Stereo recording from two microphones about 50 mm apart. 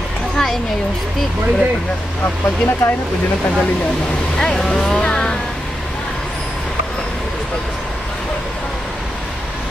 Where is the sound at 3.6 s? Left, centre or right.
Centre.